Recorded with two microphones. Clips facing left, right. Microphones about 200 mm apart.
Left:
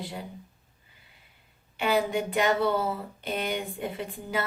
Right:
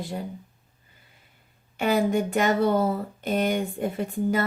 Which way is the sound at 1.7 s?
45° right (ahead or behind).